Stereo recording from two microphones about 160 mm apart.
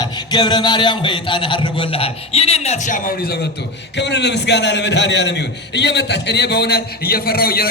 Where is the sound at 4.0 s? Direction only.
90° left; by 7.6 s 75° left (ahead or behind).